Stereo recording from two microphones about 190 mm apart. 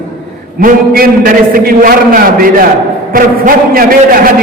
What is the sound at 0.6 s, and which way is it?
A man's voice, 50° right (ahead or behind).